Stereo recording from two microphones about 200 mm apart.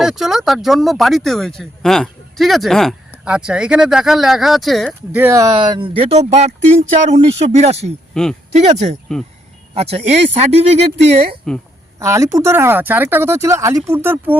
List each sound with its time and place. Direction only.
0.0 s speech: centre (ahead or behind)
5.2 s speech: 15° right (ahead or behind); by 7.9 s 30° right (ahead or behind)
8.1 s speech: 5° left (ahead or behind)
8.5 s speech: 35° right (ahead or behind)
11.9 s speech: 15° right (ahead or behind)